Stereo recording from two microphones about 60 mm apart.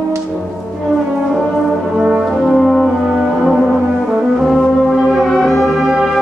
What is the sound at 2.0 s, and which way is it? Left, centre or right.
Brass instrument, centre.